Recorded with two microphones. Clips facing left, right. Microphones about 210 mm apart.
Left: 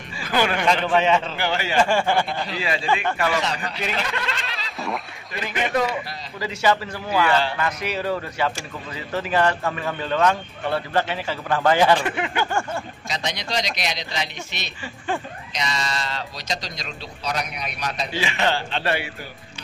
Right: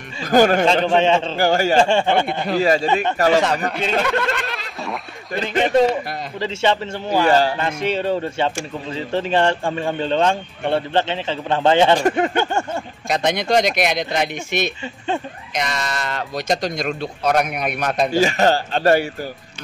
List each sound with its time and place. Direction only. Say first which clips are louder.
0.2 s speech: right 8 dB; 45° right (ahead or behind)
0.8 s a man's voice: right 3 dB; 30° right (ahead or behind)
1.3 s speech: right 8 dB; 45° right (ahead or behind)
1.8 s a man's voice: right 4 dB; 25° right (ahead or behind)
2.4 s speech: right 8 dB; 45° right (ahead or behind)
5.4 s a man's voice: right 7 dB; 30° right (ahead or behind)
7.1 s speech: right 5 dB; 40° right (ahead or behind)
7.5 s a man's voice: right 4 dB; 25° right (ahead or behind)
12.0 s speech: right 8 dB; 45° right (ahead or behind)
12.4 s a man's voice: right 4 dB; 25° right (ahead or behind)
13.1 s speech: right 10 dB; 55° right (ahead or behind)